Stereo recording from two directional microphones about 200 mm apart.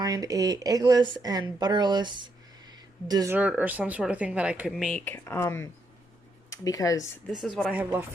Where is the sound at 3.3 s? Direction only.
5° right (ahead or behind); by 7.0 s 15° left (ahead or behind).